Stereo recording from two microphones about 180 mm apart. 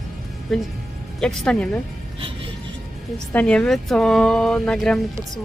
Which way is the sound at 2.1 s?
30° right (ahead or behind).